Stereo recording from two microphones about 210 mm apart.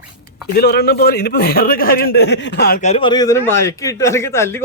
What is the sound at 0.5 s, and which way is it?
A man's voice, 50° left (ahead or behind).